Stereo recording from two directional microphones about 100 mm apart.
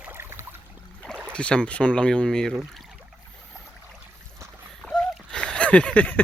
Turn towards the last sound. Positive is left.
turn(degrees=15)  # may be behind; listen again after turning